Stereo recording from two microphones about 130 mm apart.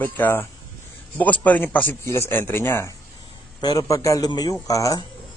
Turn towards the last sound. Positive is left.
turn(degrees=25)  # may be behind; listen again after turning